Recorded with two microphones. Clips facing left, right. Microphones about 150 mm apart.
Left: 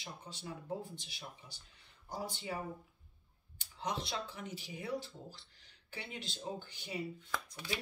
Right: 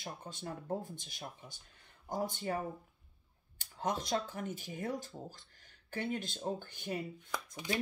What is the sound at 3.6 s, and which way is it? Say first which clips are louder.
Speech: right 3 dB; 50° right (ahead or behind).